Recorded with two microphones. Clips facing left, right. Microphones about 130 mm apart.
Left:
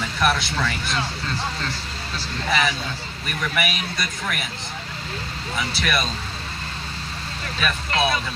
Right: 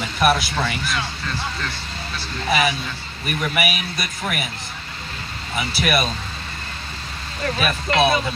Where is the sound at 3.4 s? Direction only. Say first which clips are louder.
Right 2 dB; 10° right (ahead or behind).